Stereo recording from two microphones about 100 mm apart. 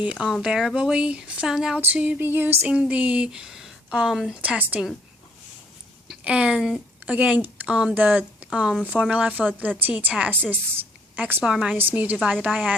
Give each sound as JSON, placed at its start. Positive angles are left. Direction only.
{"t": 0.0, "sound": "speech", "side_deg": -10}
{"t": 1.8, "sound": "a sound", "side_deg": -15}
{"t": 2.7, "sound": "speech", "side_deg": -10}
{"t": 6.1, "sound": "a woman's voice", "side_deg": -10}
{"t": 11.4, "sound": "speech", "side_deg": -10}